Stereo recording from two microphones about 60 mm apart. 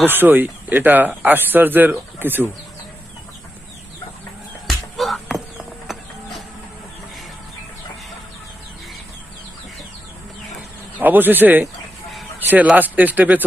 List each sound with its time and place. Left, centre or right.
0.1 s speech: right
4.6 s music: centre
10.9 s speech: right